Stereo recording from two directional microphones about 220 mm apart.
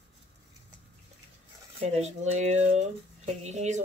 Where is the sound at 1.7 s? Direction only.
30° right (ahead or behind).